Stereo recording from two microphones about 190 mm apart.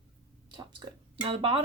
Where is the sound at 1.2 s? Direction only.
30° right (ahead or behind).